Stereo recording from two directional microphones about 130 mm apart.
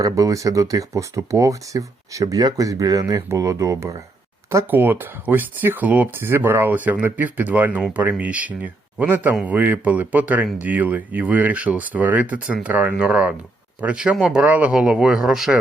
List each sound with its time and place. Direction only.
0.0 s speech: 25° right (ahead or behind); by 15.5 s 5° right (ahead or behind)